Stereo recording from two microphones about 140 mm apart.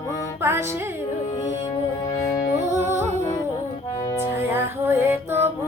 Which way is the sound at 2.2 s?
25° left (ahead or behind).